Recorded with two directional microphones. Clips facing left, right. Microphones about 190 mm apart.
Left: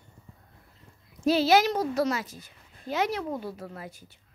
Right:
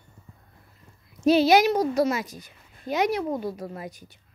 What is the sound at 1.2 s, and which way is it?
A child's voice, 20° right (ahead or behind).